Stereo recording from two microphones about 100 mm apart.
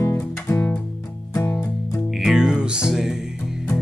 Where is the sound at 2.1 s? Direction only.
5° right (ahead or behind).